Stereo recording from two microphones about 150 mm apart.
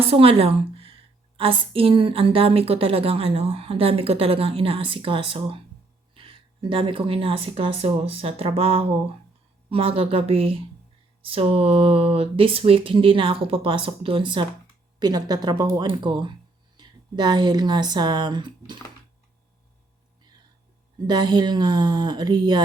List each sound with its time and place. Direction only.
0.1 s a woman's voice: 40° right (ahead or behind)
21.1 s speech: 30° right (ahead or behind)